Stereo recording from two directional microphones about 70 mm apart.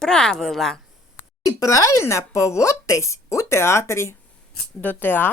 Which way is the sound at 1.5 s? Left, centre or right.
Left.